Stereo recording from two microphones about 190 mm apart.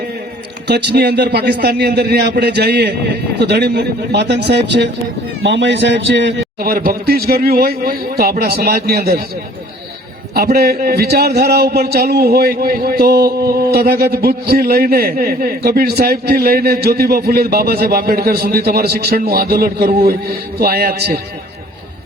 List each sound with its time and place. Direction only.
0.7 s a man's voice: 60° right (ahead or behind)
10.3 s a man's voice: 55° right (ahead or behind)